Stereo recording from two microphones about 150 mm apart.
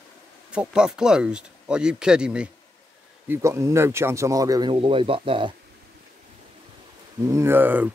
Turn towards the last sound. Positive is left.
turn(degrees=-10)  # may be behind; listen again after turning